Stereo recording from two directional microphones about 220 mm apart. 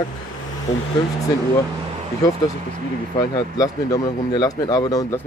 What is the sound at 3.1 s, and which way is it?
Speech, 15° left (ahead or behind).